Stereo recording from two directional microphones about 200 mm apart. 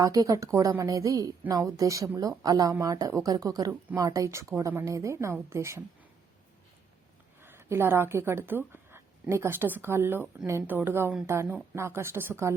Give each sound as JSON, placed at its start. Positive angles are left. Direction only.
{"t": 0.0, "sound": "a woman's voice", "side_deg": -15}
{"t": 7.4, "sound": "a woman's voice", "side_deg": -10}